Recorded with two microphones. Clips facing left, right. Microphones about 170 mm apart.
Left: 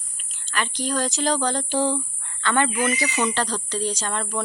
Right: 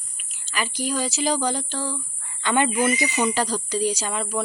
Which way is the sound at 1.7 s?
20° left (ahead or behind).